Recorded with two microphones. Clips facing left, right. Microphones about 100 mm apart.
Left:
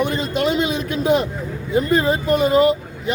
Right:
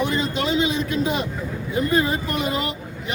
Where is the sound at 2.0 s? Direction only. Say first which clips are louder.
Left 6 dB; 35° left (ahead or behind).